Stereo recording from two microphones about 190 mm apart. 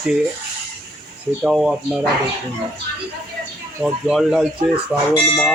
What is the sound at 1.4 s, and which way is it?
Speech, centre (ahead or behind).